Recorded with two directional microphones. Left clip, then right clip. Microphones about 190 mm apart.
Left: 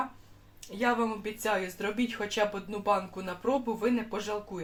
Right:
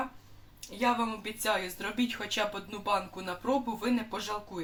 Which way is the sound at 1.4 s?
25° left (ahead or behind).